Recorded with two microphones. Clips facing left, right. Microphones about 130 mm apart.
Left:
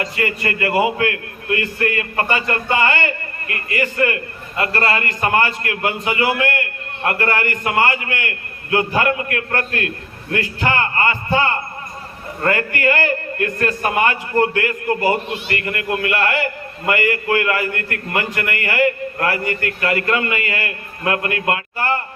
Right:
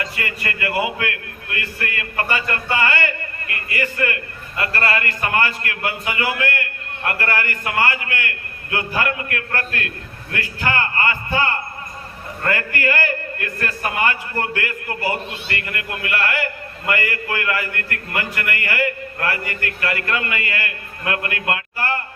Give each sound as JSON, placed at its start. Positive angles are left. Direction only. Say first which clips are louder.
{"t": 0.2, "sound": "a man's voice", "louder": "left 5 dB", "side_deg": 30}